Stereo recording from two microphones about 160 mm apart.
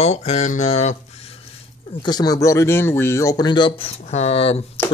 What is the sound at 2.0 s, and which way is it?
Speech, 25° left (ahead or behind).